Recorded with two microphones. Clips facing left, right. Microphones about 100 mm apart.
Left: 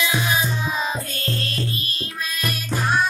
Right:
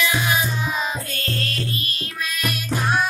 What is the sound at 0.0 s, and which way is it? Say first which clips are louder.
Music: right 1 dB; 25° left (ahead or behind).